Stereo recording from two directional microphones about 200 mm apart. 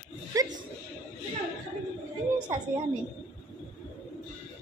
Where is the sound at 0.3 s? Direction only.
15° right (ahead or behind).